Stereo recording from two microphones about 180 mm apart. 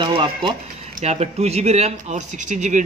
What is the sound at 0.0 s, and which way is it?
Speech, 25° right (ahead or behind).